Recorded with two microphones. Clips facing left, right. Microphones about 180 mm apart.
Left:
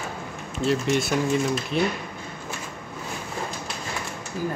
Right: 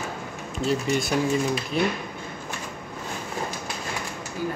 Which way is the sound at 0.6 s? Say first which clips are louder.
Left 2 dB; centre (ahead or behind).